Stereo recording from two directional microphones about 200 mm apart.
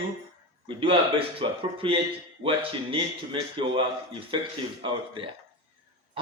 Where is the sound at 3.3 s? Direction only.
25° right (ahead or behind).